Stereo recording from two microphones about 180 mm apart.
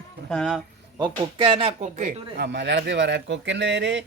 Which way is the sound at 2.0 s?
45° right (ahead or behind).